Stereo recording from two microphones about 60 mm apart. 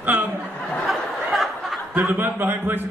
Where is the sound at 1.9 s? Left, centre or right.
Right.